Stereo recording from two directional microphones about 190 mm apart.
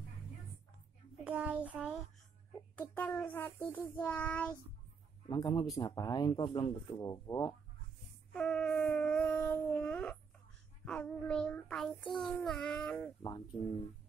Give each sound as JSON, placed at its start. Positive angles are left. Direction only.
{"t": 1.2, "sound": "child singing", "side_deg": -5}
{"t": 2.8, "sound": "child singing", "side_deg": 10}
{"t": 5.3, "sound": "speech", "side_deg": 25}
{"t": 8.3, "sound": "child singing", "side_deg": 5}
{"t": 9.4, "sound": "a sound", "side_deg": 10}
{"t": 10.9, "sound": "child singing", "side_deg": 5}
{"t": 13.2, "sound": "speech", "side_deg": 20}